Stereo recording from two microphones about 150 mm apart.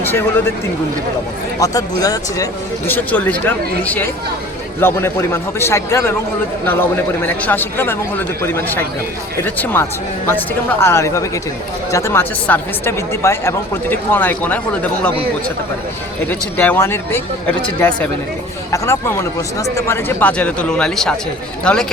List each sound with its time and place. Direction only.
0.0 s speech: 15° left (ahead or behind)
1.5 s speech: 25° left (ahead or behind)
2.8 s speech: 10° left (ahead or behind)
16.2 s speech: 10° left (ahead or behind)